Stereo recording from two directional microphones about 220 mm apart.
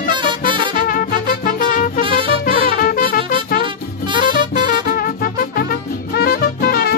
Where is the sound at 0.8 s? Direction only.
40° left (ahead or behind).